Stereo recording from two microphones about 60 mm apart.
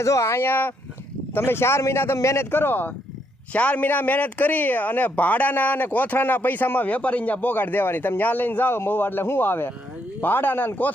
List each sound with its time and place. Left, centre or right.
0.0 s speech: left
2.1 s speech: left